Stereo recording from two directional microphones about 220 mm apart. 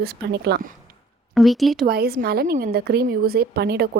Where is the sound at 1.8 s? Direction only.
45° right (ahead or behind).